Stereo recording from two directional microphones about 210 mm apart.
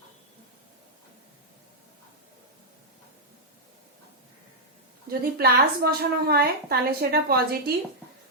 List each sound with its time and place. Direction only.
5.2 s a woman's voice: 50° right (ahead or behind)